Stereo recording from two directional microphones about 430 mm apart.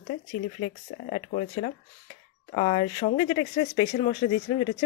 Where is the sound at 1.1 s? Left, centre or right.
Centre.